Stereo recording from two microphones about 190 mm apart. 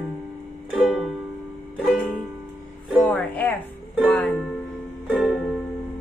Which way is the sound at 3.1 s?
10° left (ahead or behind).